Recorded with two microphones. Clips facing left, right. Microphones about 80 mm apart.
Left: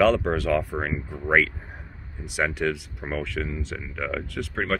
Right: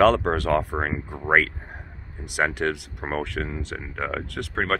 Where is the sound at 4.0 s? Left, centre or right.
Right.